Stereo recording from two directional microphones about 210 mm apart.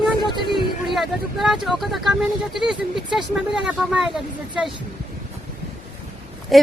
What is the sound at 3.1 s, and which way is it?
Speech, 5° right (ahead or behind).